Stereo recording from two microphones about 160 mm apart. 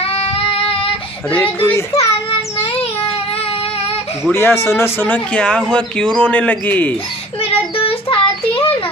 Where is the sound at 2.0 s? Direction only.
40° left (ahead or behind).